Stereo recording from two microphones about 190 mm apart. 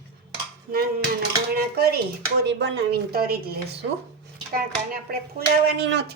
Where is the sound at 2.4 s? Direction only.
60° right (ahead or behind).